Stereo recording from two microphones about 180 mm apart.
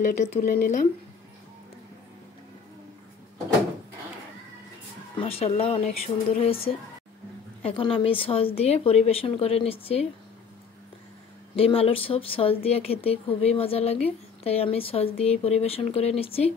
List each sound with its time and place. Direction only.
0.0 s a woman's voice: 45° left (ahead or behind)
5.1 s a woman's voice: 30° left (ahead or behind)
7.6 s a woman's voice: 30° left (ahead or behind)
11.5 s a woman's voice: 35° left (ahead or behind)